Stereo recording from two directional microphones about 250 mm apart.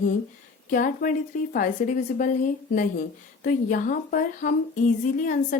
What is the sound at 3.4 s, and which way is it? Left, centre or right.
A woman's voice, left.